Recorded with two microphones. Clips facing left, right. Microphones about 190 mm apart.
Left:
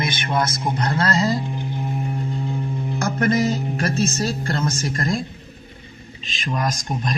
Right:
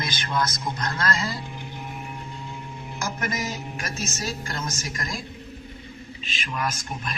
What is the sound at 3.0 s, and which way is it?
Mantra, 60° left (ahead or behind).